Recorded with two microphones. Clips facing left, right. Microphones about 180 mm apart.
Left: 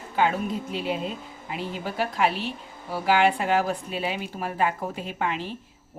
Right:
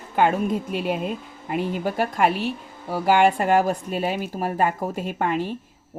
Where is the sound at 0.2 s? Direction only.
50° right (ahead or behind).